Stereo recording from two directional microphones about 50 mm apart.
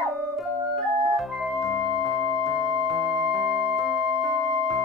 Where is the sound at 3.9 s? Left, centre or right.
Right.